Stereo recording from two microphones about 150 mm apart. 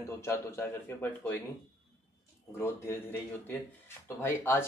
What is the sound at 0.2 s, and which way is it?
Speech, 15° left (ahead or behind).